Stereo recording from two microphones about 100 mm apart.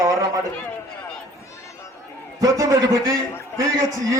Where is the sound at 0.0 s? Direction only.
35° right (ahead or behind).